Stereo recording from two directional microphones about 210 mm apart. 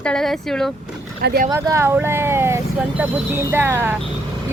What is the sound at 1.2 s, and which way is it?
Speech, 50° right (ahead or behind).